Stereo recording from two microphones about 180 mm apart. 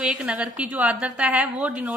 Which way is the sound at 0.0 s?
5° right (ahead or behind).